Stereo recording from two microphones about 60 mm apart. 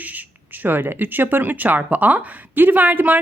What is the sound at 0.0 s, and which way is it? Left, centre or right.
A woman's voice, right.